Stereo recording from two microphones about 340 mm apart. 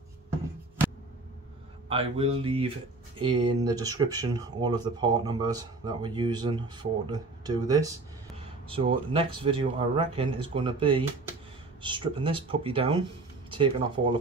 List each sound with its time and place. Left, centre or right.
1.9 s speech: centre